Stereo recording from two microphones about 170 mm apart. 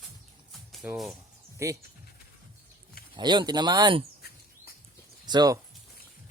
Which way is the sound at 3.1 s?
25° right (ahead or behind).